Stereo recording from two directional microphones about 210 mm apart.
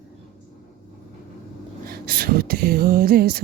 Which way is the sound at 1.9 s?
45° right (ahead or behind).